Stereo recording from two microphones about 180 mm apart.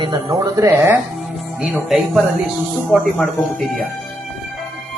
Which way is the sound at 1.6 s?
5° right (ahead or behind).